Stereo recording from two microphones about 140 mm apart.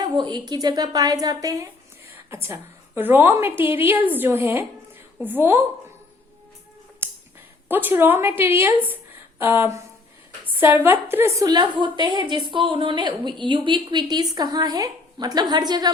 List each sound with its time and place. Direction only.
0.0 s a woman's voice: 30° right (ahead or behind); by 5.6 s 15° right (ahead or behind)
7.7 s a woman's voice: 15° right (ahead or behind)
10.4 s a sound: 15° right (ahead or behind)
10.8 s a woman's voice: 15° right (ahead or behind)